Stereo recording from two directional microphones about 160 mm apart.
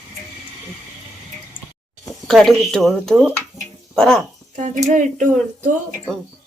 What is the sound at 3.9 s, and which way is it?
Female singing, 5° left (ahead or behind).